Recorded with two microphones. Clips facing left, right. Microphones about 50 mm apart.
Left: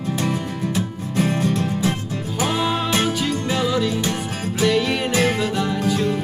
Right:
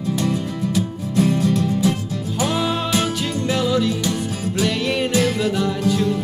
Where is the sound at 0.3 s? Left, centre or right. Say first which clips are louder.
Right 2 dB; left.